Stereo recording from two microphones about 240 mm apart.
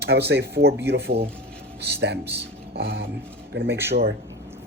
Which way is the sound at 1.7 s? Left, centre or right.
Right.